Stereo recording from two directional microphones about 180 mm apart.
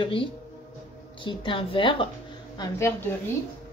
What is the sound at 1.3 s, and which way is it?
Speech, 30° left (ahead or behind).